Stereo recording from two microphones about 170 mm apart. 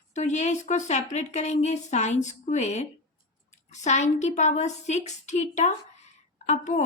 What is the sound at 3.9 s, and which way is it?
A woman's voice, 45° left (ahead or behind).